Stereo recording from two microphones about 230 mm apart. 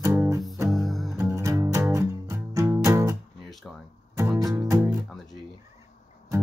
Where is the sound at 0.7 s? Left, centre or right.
Centre.